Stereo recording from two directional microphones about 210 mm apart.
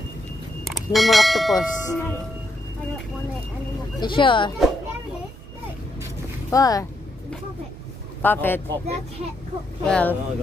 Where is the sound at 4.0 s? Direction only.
25° left (ahead or behind).